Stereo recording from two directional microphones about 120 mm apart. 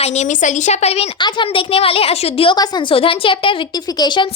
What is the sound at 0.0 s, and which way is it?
A woman's voice, 65° left (ahead or behind).